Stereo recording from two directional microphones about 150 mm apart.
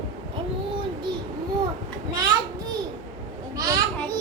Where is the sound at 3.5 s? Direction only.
25° right (ahead or behind).